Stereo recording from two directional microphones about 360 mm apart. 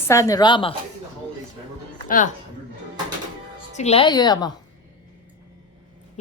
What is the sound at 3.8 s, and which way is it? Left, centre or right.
Speech, centre.